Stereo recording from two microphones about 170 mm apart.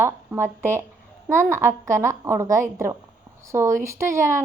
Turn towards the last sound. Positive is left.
turn(degrees=-15)  # may be behind; listen again after turning